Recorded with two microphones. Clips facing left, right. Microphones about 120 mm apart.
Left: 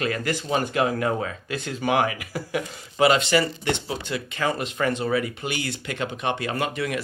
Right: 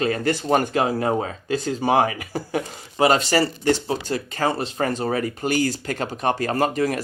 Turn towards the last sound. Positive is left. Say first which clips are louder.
# right 5 dB
turn(degrees=-40)  # may be behind; listen again after turning